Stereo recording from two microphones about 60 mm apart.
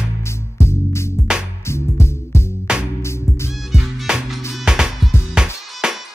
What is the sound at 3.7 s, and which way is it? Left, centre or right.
Music, centre.